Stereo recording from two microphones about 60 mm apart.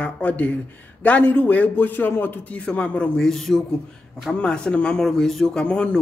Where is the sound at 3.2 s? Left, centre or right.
Centre.